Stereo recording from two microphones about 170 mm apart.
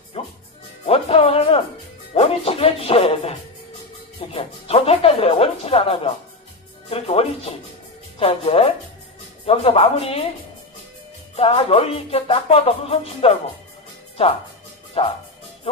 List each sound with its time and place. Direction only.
0.2 s music: 35° left (ahead or behind)
4.3 s speech: 35° left (ahead or behind)
11.3 s speech: 35° left (ahead or behind)
15.0 s speech: 35° left (ahead or behind)